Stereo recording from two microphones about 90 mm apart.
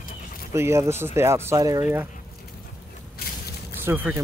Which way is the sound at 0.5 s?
30° right (ahead or behind).